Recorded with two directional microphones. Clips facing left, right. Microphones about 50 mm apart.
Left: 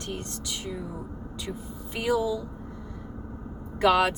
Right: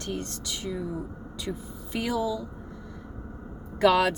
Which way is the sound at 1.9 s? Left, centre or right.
Centre.